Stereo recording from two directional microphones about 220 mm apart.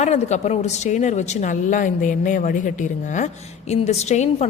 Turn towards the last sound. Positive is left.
turn(degrees=30)  # may be behind; listen again after turning